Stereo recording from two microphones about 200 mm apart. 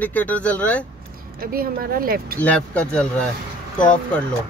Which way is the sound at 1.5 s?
50° right (ahead or behind).